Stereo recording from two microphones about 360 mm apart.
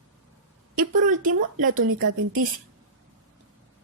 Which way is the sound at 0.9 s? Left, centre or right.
Right.